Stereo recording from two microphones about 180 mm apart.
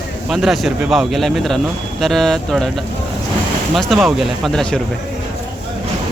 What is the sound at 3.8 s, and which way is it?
Speech, centre (ahead or behind).